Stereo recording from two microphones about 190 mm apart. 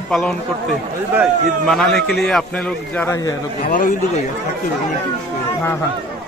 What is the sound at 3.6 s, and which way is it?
Speech, 45° left (ahead or behind).